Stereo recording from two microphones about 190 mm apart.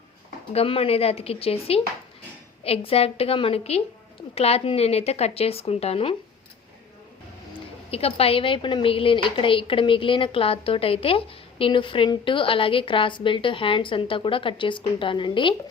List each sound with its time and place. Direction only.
0.5 s a woman's voice: 30° left (ahead or behind)
7.9 s a woman's voice: 30° left (ahead or behind)